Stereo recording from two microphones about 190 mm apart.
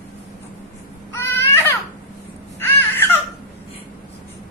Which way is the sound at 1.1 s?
15° left (ahead or behind).